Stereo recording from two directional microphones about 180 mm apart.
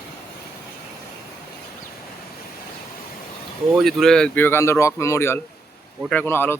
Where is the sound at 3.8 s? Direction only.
Centre (ahead or behind).